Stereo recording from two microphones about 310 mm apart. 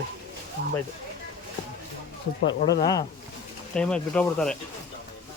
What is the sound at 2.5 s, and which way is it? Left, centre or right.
Speech, left.